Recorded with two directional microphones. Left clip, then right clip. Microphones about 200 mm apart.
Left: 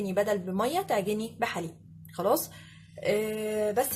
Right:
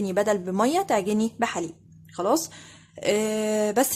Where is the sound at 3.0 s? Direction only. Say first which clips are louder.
Right 4 dB; 45° right (ahead or behind).